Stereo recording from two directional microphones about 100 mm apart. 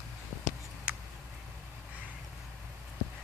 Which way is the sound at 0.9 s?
10° right (ahead or behind).